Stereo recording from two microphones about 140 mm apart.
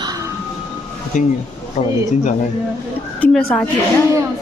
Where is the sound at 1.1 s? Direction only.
60° left (ahead or behind).